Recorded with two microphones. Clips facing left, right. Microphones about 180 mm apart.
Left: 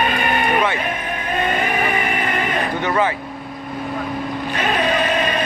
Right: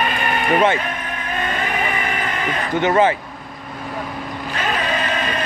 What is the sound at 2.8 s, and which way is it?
Speech, 25° right (ahead or behind).